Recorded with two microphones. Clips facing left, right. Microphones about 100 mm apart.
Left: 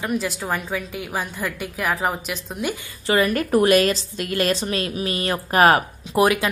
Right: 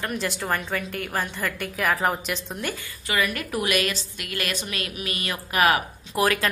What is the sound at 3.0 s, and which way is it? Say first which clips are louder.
A woman's voice: left 7 dB; 35° left (ahead or behind).